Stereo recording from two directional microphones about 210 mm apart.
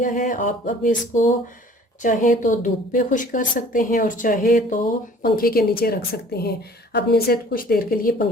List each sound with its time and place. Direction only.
0.0 s a woman's voice: 40° left (ahead or behind)